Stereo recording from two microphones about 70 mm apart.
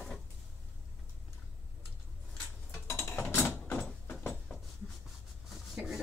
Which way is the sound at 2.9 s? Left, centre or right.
Left.